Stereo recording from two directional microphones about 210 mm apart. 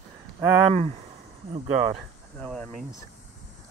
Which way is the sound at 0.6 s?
30° right (ahead or behind).